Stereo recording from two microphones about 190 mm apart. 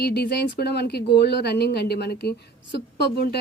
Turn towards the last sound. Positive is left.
turn(degrees=60)  # may be behind; listen again after turning